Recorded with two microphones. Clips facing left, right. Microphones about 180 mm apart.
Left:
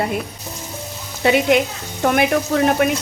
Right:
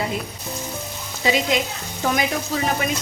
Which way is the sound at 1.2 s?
60° left (ahead or behind).